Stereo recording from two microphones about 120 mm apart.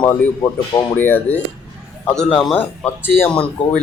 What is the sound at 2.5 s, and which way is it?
Speech, 15° left (ahead or behind).